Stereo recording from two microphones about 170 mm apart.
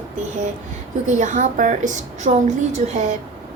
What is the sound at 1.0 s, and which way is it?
A woman's voice, 45° right (ahead or behind).